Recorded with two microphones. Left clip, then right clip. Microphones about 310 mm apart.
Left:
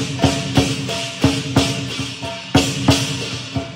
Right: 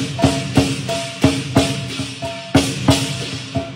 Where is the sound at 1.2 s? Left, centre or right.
Centre.